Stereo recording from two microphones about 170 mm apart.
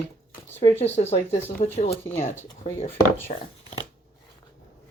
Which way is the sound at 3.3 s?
40° left (ahead or behind).